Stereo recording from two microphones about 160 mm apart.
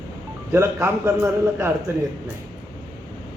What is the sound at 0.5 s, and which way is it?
A man's voice, 15° right (ahead or behind).